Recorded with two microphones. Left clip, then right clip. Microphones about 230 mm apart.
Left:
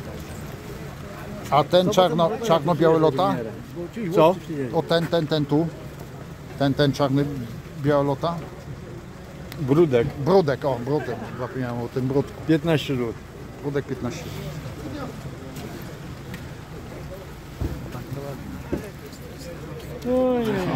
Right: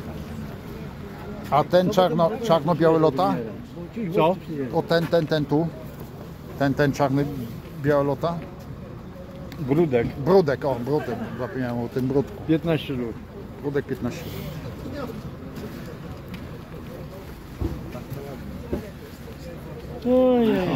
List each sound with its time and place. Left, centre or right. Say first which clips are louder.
1.5 s speech: left 1 dB; centre
4.1 s speech: left 3 dB; left
4.7 s speech: right 1 dB; centre
9.7 s speech: left 3 dB; left
10.2 s speech: right 2 dB; centre
12.4 s speech: left 2 dB; left
13.7 s speech: right 1 dB; centre
20.1 s speech: right 3 dB; right